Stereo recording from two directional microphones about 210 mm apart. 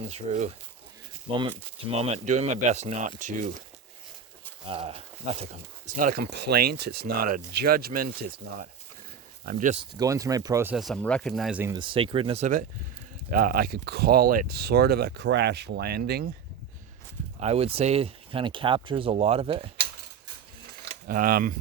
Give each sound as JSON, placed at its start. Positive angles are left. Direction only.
{"t": 0.0, "sound": "speech", "side_deg": -30}
{"t": 4.7, "sound": "speech", "side_deg": -25}
{"t": 10.0, "sound": "speech", "side_deg": -15}
{"t": 11.8, "sound": "speech", "side_deg": -25}
{"t": 17.4, "sound": "speech", "side_deg": -30}
{"t": 21.1, "sound": "speech", "side_deg": -45}